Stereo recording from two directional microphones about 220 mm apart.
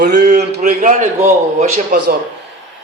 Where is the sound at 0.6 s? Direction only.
35° right (ahead or behind).